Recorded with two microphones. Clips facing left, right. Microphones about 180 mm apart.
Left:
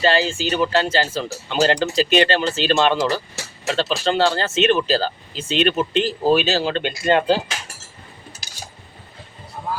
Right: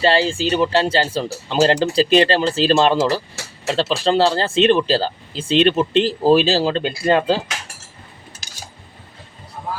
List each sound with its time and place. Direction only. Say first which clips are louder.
0.0 s speech: right 2 dB; 30° right (ahead or behind)